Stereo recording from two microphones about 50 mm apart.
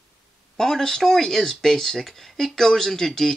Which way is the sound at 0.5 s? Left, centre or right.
Centre.